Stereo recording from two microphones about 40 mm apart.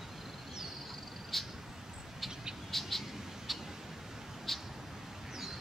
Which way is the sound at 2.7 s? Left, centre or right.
Centre.